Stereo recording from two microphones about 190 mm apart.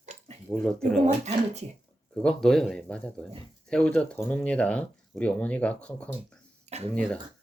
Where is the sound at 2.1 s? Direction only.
5° left (ahead or behind).